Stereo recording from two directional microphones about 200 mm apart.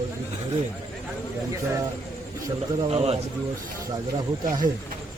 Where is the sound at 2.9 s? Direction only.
30° right (ahead or behind).